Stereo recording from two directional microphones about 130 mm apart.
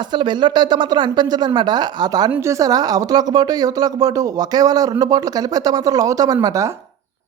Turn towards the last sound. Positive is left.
turn(degrees=-30)  # may be behind; listen again after turning